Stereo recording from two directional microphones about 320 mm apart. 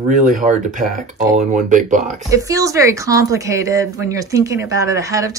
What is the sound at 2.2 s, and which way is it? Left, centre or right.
A woman's voice, centre.